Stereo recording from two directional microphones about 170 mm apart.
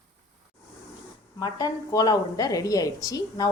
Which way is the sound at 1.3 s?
25° left (ahead or behind).